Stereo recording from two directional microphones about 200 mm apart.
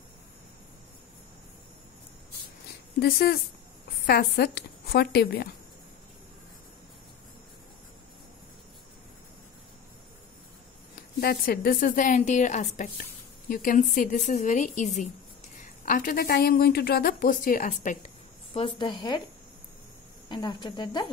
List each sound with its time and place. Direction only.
3.0 s a woman's voice: 50° left (ahead or behind)
11.1 s a woman's voice: 50° left (ahead or behind)
18.8 s speech: 25° left (ahead or behind)
20.2 s speech: 20° left (ahead or behind)